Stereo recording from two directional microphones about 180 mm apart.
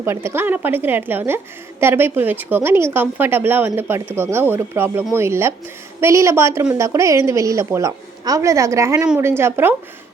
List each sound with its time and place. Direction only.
0.0 s speech: 15° right (ahead or behind)